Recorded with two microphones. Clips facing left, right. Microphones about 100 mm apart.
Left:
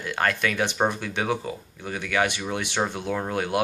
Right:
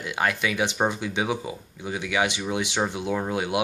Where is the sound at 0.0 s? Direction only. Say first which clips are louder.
Left 1 dB; 15° right (ahead or behind).